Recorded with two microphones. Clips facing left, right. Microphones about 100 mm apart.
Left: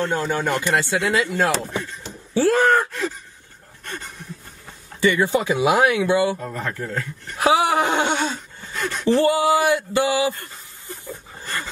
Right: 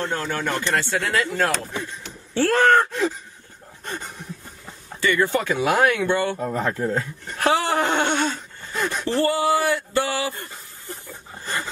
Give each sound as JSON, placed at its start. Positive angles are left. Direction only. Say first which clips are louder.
{"t": 0.0, "sound": "speech", "louder": "left 3 dB", "side_deg": 15}
{"t": 3.8, "sound": "a sound", "louder": "right 2 dB", "side_deg": -20}
{"t": 5.0, "sound": "speech", "louder": "left 2 dB", "side_deg": 15}
{"t": 6.4, "sound": "speech", "louder": "right 5 dB", "side_deg": -25}
{"t": 7.3, "sound": "a sound", "louder": "left 3 dB", "side_deg": 10}
{"t": 9.1, "sound": "speech", "louder": "left 4 dB", "side_deg": 15}